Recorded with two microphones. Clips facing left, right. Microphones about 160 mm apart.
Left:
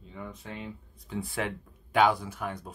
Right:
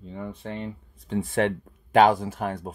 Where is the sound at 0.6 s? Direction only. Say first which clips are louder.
Right 6 dB; 70° right (ahead or behind).